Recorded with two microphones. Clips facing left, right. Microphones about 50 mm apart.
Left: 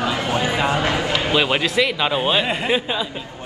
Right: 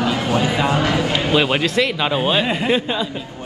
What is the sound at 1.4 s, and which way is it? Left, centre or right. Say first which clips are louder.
A man's voice: right 1 dB; centre.